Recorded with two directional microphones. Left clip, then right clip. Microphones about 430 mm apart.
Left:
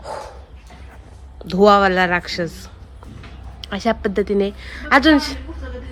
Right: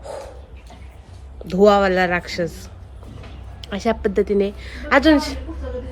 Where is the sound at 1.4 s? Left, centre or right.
Centre.